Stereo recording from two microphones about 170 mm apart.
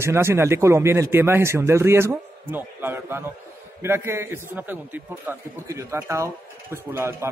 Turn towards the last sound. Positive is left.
turn(degrees=-15)  # may be behind; listen again after turning